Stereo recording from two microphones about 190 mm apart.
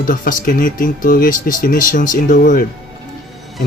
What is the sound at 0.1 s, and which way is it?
Speech, 45° left (ahead or behind).